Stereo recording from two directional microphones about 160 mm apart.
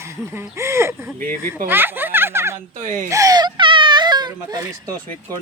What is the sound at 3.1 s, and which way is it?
Baby cry, 20° right (ahead or behind).